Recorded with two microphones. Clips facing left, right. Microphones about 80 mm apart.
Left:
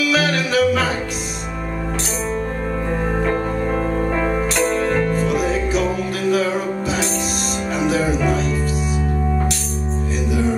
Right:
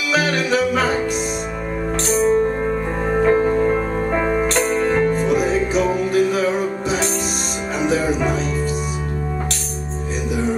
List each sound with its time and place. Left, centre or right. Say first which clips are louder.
0.1 s music: even; centre
3.3 s music: right 5 dB; centre
4.6 s music: left 1 dB; centre
7.8 s music: even; centre